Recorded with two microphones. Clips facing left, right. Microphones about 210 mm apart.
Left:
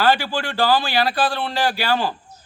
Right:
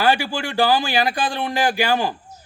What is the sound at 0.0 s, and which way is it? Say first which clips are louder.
Speech: even; 10° right (ahead or behind).